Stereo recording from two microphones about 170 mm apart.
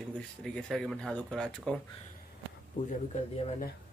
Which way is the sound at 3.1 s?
45° left (ahead or behind).